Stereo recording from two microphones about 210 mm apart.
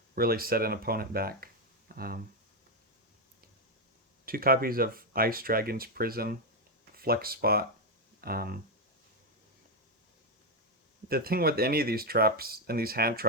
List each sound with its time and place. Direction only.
0.2 s speech: 45° right (ahead or behind)
4.3 s speech: 45° right (ahead or behind)
11.1 s speech: 45° right (ahead or behind)